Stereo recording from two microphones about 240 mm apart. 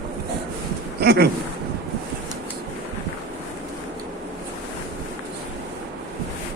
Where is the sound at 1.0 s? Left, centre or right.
Right.